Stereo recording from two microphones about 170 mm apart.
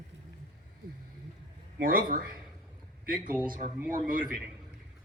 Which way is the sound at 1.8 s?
55° right (ahead or behind).